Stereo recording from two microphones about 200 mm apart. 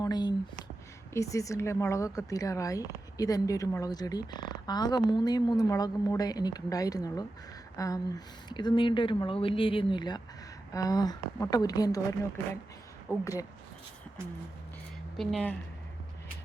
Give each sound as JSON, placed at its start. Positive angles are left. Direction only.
{"t": 0.0, "sound": "speech", "side_deg": 20}
{"t": 13.1, "sound": "speech", "side_deg": 15}
{"t": 15.1, "sound": "speech", "side_deg": 0}